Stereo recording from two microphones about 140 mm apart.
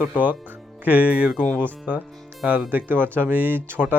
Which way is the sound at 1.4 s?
5° left (ahead or behind).